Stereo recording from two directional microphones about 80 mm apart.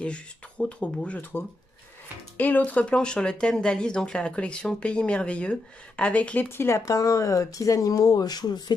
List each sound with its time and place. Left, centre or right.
0.0 s speech: centre
6.5 s speech: left
6.9 s speech: left